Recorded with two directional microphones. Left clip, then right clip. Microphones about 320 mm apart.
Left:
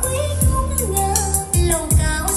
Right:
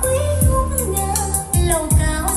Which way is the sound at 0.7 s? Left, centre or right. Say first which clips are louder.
Left 1 dB; centre.